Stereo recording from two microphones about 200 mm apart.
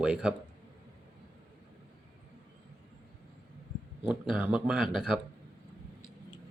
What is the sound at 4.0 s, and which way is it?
Speech, 5° right (ahead or behind).